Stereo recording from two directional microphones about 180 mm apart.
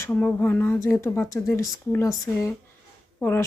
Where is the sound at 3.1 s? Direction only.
10° left (ahead or behind).